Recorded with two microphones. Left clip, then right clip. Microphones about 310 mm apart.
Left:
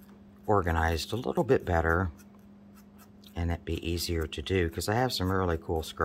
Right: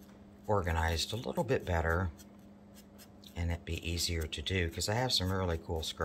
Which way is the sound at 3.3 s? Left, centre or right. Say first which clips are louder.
Left 6 dB; centre.